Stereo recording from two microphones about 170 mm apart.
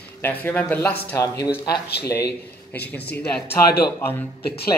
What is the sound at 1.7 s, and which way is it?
Speech, 70° left (ahead or behind).